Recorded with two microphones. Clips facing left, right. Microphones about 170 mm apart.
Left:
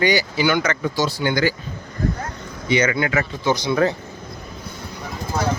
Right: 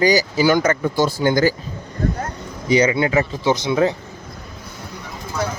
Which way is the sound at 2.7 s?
35° right (ahead or behind).